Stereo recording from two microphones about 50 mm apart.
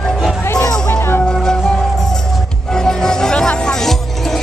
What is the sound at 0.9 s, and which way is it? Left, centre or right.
Music, left.